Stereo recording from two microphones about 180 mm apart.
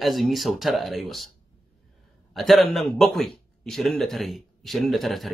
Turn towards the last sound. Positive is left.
turn(degrees=0)  # may be behind; listen again after turning